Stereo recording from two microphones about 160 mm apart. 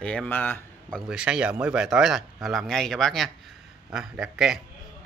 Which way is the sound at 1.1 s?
5° right (ahead or behind).